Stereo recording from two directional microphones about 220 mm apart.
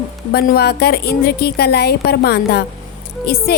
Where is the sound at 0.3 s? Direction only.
45° left (ahead or behind).